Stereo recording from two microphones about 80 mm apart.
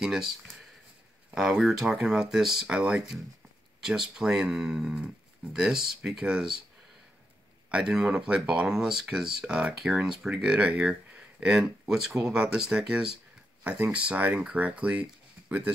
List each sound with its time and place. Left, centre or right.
0.0 s speech: centre
7.7 s speech: centre